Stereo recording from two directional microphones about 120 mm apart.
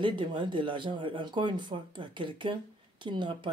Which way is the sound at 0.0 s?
45° right (ahead or behind).